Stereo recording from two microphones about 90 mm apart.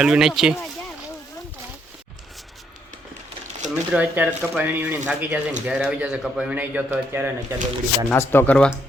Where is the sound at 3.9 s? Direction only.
15° right (ahead or behind).